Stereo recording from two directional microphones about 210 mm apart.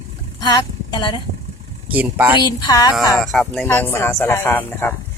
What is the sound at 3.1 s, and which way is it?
Speech, centre (ahead or behind).